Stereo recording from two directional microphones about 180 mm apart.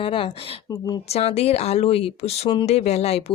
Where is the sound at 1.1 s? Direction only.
35° left (ahead or behind).